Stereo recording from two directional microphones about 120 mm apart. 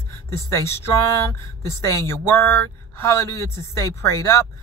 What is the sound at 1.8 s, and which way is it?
Speech, 20° left (ahead or behind).